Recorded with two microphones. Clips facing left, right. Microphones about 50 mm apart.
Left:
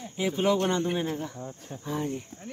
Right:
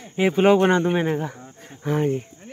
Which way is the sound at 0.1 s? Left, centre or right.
Right.